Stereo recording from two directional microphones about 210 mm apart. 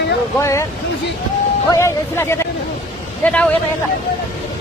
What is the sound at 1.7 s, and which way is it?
Speech, 10° left (ahead or behind).